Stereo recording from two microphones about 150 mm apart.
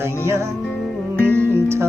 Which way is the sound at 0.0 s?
15° right (ahead or behind).